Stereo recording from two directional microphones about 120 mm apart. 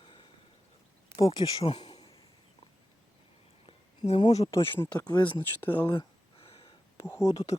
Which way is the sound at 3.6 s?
55° left (ahead or behind).